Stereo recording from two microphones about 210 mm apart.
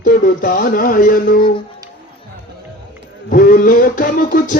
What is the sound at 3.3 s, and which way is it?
Music, 40° left (ahead or behind).